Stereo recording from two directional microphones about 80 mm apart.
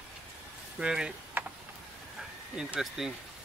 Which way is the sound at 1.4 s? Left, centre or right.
Right.